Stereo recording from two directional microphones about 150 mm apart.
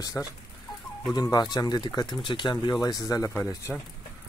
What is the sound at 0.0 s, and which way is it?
Speech, 20° left (ahead or behind).